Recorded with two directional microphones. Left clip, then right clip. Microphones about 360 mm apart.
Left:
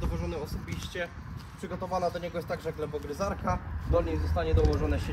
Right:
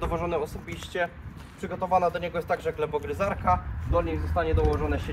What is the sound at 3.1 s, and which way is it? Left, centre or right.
Speech, right.